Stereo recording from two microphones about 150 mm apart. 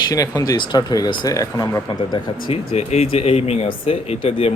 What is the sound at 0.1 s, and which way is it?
Speech, 25° left (ahead or behind).